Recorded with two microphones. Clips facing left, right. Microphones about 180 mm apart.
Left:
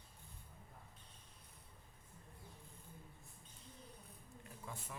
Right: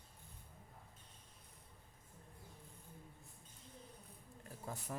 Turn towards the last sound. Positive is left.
turn(degrees=-40)  # may be behind; listen again after turning